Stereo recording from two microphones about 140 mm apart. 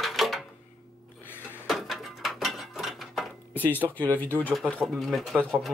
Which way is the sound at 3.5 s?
15° left (ahead or behind).